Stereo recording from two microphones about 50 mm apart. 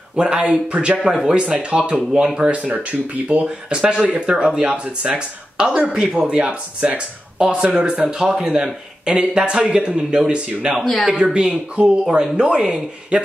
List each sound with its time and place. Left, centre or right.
0.1 s a man's voice: right
10.8 s speech: centre
11.3 s a man's voice: centre